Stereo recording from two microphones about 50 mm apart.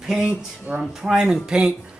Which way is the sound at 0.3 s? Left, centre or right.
Centre.